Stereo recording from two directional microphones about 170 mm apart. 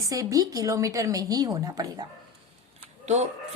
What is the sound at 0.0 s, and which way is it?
A woman's voice, 20° right (ahead or behind).